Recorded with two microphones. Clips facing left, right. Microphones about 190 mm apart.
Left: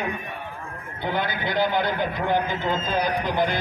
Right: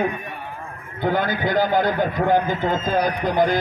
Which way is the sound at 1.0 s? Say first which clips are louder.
Right 5 dB; 45° right (ahead or behind).